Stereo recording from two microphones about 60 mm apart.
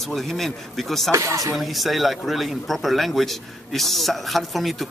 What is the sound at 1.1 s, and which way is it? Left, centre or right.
Speech, right.